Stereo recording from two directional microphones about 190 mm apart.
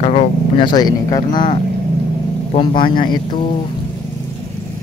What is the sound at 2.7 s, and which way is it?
Speech, 50° left (ahead or behind).